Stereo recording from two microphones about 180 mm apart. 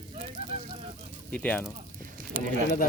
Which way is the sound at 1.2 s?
5° left (ahead or behind).